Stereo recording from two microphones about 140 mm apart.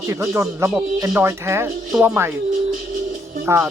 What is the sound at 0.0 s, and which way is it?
Speech, 20° right (ahead or behind).